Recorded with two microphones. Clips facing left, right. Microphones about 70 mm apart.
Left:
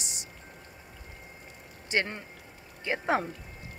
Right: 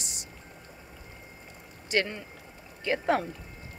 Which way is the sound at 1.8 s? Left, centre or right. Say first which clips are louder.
Right 2 dB; left.